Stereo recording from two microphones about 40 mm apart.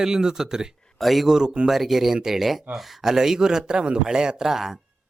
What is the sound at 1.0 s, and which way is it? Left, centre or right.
Speech, centre.